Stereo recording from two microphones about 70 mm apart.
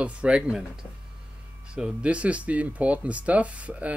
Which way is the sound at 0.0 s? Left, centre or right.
Centre.